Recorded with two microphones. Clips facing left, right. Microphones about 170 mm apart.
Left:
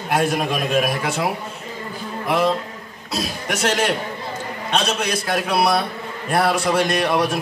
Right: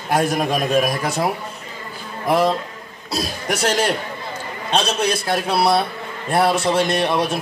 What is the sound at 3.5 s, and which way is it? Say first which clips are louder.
A man's voice: right 1 dB; 35° right (ahead or behind).